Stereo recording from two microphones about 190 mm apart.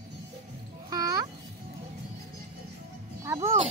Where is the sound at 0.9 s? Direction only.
20° right (ahead or behind).